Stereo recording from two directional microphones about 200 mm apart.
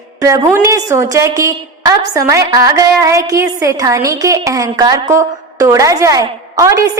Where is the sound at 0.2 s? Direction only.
15° right (ahead or behind).